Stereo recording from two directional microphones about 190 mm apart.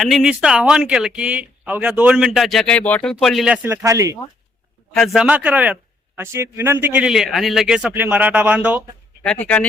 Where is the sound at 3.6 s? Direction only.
15° right (ahead or behind).